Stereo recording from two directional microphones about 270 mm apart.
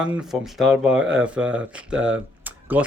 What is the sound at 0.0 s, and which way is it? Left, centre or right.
Speech, centre.